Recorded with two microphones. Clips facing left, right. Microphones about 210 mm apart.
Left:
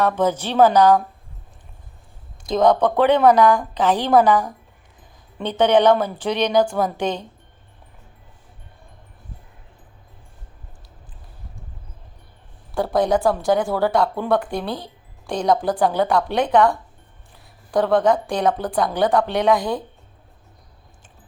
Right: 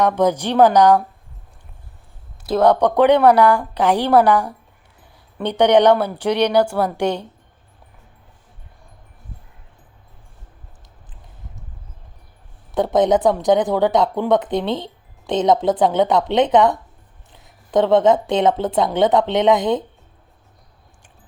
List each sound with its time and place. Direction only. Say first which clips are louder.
0.0 s a woman's voice: right 3 dB; 15° right (ahead or behind)
2.5 s a woman's voice: right 2 dB; 10° right (ahead or behind)
12.7 s a woman's voice: right 3 dB; 20° right (ahead or behind)